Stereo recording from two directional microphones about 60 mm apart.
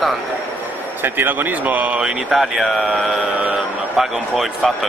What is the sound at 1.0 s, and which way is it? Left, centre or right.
Speech, right.